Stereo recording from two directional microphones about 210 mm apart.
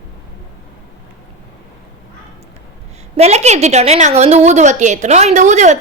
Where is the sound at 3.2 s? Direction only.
30° right (ahead or behind).